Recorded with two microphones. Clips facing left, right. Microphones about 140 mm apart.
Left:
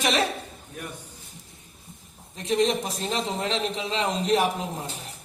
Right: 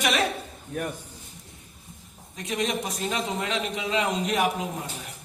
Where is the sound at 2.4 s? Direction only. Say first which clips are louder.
Left 5 dB; 30° left (ahead or behind).